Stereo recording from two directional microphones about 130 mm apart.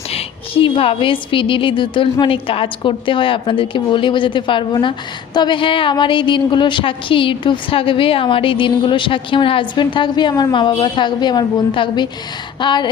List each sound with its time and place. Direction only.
0.1 s a woman's voice: 45° left (ahead or behind)